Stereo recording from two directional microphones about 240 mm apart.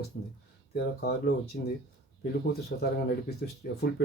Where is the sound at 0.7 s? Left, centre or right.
Left.